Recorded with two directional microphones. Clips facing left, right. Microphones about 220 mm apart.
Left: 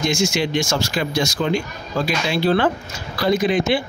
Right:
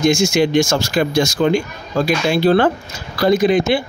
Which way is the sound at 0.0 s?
45° right (ahead or behind).